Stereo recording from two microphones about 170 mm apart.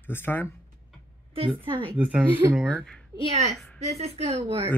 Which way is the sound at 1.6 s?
30° right (ahead or behind).